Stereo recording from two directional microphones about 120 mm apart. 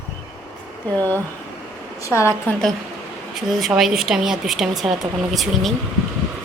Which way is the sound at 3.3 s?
5° right (ahead or behind).